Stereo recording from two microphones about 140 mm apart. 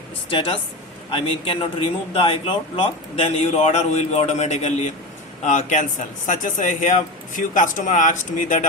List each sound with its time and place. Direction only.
0.3 s a man's voice: 40° left (ahead or behind); by 8.6 s 65° left (ahead or behind)